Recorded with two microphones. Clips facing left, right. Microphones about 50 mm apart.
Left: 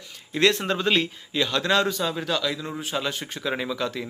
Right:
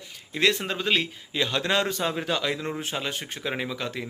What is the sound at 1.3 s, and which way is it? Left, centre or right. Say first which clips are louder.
Speech: left 2 dB; right.